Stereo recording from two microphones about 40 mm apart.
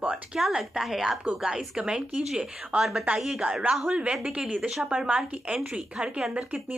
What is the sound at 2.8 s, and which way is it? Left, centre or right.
Speech, centre.